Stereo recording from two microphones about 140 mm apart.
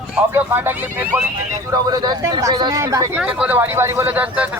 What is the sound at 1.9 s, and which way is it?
Speech, 30° right (ahead or behind).